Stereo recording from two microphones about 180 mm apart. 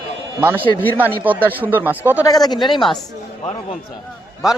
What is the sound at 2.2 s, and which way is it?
Speech, 20° left (ahead or behind).